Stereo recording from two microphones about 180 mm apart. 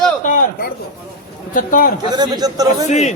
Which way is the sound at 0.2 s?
50° left (ahead or behind).